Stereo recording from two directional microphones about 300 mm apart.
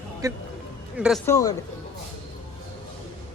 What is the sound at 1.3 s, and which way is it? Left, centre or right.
Speech, centre.